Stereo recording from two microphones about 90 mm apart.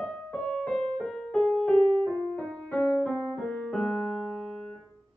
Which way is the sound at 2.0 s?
20° left (ahead or behind).